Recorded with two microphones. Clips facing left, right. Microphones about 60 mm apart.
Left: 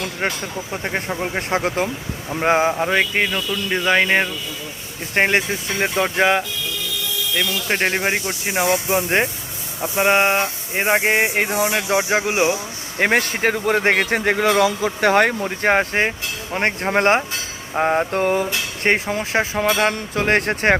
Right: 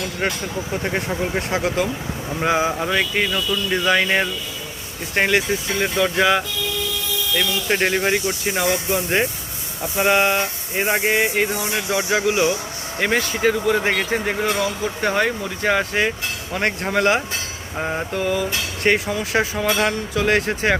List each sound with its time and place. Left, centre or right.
0.7 s speech: centre
1.4 s speech: left
2.3 s a sound: left
2.7 s speech: left
5.1 s a sound: left
5.8 s speech: left
7.3 s speech: centre
8.2 s speech: centre
8.6 s a sound: left
11.9 s speech: left
13.0 s speech: left
17.7 s a sound: left